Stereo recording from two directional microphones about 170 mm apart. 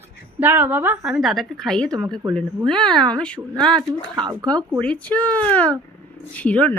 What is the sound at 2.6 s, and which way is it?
Speech, 5° left (ahead or behind).